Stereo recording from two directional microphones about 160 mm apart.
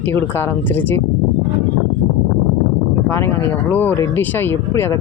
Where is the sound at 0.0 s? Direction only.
15° left (ahead or behind).